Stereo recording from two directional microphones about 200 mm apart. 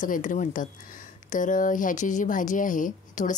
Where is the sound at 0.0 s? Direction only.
40° left (ahead or behind).